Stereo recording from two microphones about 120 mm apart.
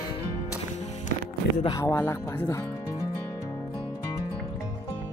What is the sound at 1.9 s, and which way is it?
Speech, 20° left (ahead or behind).